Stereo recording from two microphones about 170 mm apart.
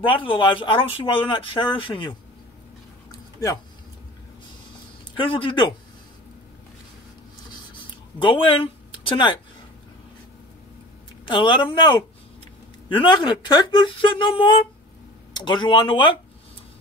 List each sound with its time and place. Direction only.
0.0 s speech: 30° left (ahead or behind)
3.1 s a sound: 20° left (ahead or behind)
5.1 s speech: 30° left (ahead or behind)
8.2 s speech: 30° left (ahead or behind)
11.2 s speech: 30° left (ahead or behind)